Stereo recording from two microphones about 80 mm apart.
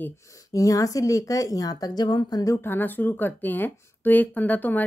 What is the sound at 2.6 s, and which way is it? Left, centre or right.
Speech, left.